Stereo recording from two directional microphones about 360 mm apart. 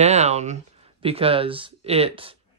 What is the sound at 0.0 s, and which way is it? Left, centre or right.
Speech, centre.